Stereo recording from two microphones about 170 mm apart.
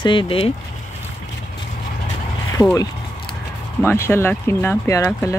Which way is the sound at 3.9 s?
15° left (ahead or behind).